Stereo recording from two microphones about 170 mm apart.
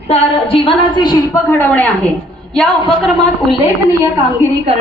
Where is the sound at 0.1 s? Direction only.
35° left (ahead or behind); by 1.9 s 10° left (ahead or behind).